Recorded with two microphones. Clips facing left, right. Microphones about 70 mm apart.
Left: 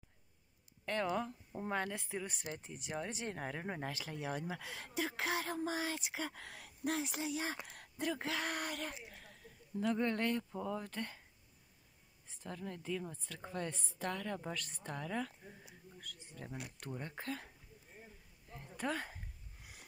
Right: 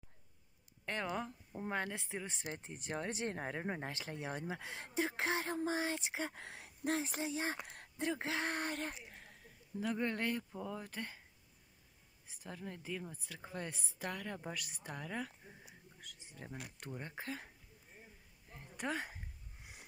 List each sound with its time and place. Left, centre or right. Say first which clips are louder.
0.8 s speech: left 3 dB; centre; by 2.9 s right
2.9 s speech: right 2 dB; right
9.8 s speech: left 2 dB; centre
12.3 s speech: left 2 dB; centre
18.5 s a sound: left 1 dB; right